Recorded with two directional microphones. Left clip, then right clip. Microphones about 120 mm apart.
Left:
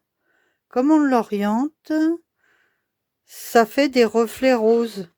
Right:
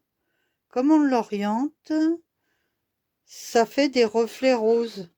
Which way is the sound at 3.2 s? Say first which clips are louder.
Left 5 dB; 40° left (ahead or behind).